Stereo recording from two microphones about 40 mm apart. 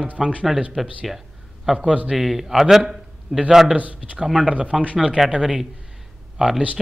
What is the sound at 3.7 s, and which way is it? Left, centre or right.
Speech, right.